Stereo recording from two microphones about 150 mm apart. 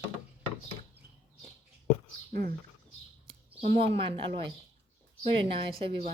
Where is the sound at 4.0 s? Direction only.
35° right (ahead or behind).